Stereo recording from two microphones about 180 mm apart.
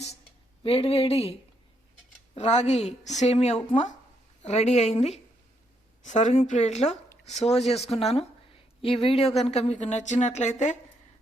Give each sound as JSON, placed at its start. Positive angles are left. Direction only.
{"t": 0.6, "sound": "speech", "side_deg": 35}